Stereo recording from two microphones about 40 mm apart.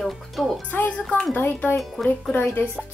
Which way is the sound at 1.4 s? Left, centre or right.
Left.